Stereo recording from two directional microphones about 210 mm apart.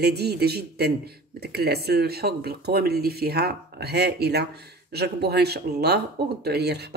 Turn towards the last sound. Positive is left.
turn(degrees=-50)  # may be behind; listen again after turning